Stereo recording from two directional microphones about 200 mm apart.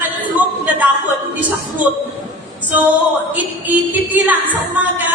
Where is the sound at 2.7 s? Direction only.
10° right (ahead or behind).